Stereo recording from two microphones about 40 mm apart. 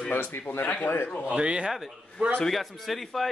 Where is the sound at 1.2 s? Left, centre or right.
Right.